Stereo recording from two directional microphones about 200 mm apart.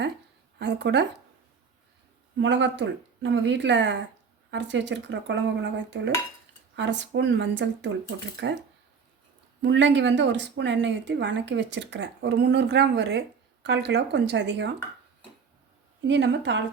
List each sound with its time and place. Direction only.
0.6 s a woman's voice: 60° right (ahead or behind)
2.4 s a woman's voice: 65° right (ahead or behind)
9.6 s a woman's voice: 65° right (ahead or behind)
16.0 s a woman's voice: 65° right (ahead or behind)